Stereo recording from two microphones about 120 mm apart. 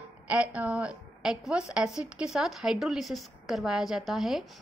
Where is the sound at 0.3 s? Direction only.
10° right (ahead or behind).